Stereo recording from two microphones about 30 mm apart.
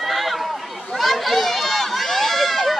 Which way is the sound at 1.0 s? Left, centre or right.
Centre.